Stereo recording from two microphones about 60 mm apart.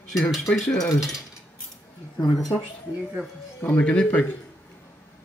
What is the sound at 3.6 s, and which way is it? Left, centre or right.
Speech, left.